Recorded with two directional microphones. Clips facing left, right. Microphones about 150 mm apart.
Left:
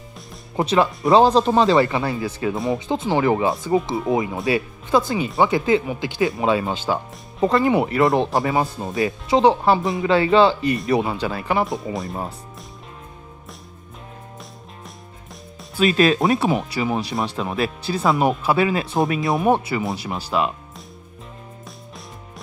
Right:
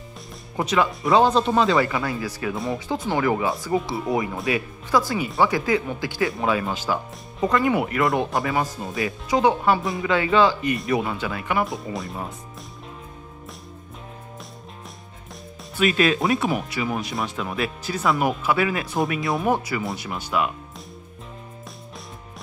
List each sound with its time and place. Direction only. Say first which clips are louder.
0.6 s speech: left 3 dB; 30° left (ahead or behind)
11.9 s speech: left 3 dB; centre (ahead or behind)
15.8 s speech: left 3 dB; 35° left (ahead or behind)